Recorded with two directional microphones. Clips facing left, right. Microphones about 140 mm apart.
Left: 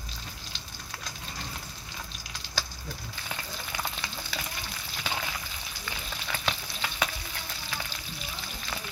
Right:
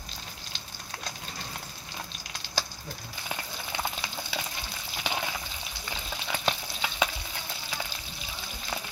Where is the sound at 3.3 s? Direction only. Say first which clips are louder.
Right 2 dB; 15° right (ahead or behind).